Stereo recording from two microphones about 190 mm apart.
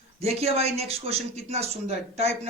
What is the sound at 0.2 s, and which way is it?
Speech, 35° right (ahead or behind).